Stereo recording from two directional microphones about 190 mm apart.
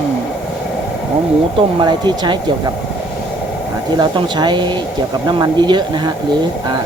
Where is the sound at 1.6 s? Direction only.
25° right (ahead or behind).